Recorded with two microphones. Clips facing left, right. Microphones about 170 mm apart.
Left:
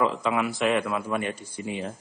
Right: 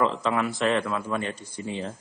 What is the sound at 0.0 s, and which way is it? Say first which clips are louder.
Speech: even; 5° left (ahead or behind).